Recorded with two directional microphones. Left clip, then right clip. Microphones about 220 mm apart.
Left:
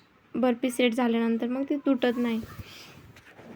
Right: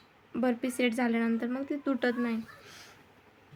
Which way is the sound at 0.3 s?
5° left (ahead or behind).